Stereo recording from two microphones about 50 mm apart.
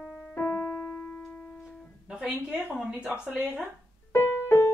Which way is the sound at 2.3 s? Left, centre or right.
Right.